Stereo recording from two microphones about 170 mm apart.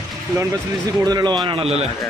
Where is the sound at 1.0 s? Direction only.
25° right (ahead or behind).